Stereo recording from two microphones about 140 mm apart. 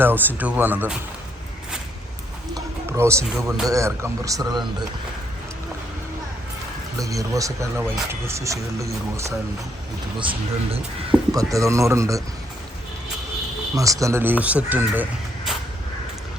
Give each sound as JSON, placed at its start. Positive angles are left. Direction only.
{"t": 0.0, "sound": "speech", "side_deg": -15}
{"t": 2.6, "sound": "music", "side_deg": -20}
{"t": 3.7, "sound": "speech", "side_deg": -20}
{"t": 7.0, "sound": "speech", "side_deg": -25}
{"t": 10.2, "sound": "speech", "side_deg": -35}
{"t": 11.1, "sound": "speech", "side_deg": -10}
{"t": 11.5, "sound": "speech", "side_deg": -20}
{"t": 13.7, "sound": "speech", "side_deg": -25}